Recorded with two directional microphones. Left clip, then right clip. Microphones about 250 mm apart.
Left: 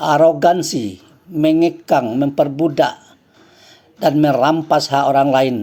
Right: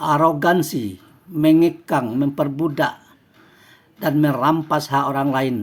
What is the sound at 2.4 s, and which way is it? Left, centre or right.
Speech, right.